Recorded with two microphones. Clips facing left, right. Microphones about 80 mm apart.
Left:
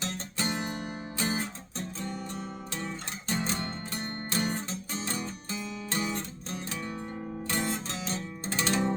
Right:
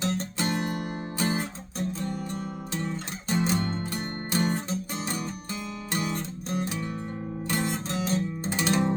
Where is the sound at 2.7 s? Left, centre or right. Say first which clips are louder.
Right 6 dB; centre.